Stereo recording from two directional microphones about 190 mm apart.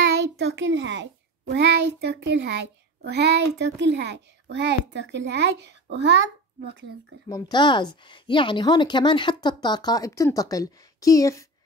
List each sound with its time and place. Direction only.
0.0 s a sound: 70° right (ahead or behind)
1.5 s a child's voice: 60° right (ahead or behind)
7.2 s a woman's voice: 20° left (ahead or behind)